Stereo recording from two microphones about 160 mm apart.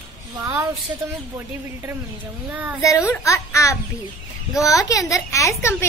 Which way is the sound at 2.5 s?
10° right (ahead or behind).